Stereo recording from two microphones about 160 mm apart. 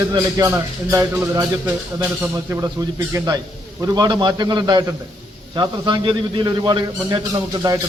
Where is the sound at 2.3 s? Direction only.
20° right (ahead or behind).